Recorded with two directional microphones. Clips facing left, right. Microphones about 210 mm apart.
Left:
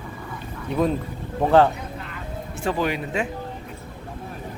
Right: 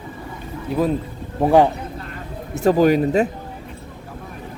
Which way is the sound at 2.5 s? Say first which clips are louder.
Right 10 dB; 40° right (ahead or behind).